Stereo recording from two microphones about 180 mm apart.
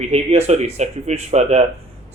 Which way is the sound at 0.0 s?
35° right (ahead or behind).